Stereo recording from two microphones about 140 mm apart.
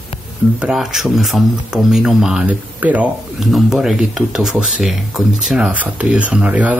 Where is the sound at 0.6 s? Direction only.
5° right (ahead or behind).